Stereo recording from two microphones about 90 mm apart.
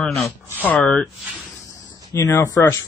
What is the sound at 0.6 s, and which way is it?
Speech, 20° left (ahead or behind).